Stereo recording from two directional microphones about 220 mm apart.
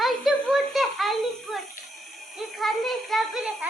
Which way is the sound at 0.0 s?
Centre (ahead or behind).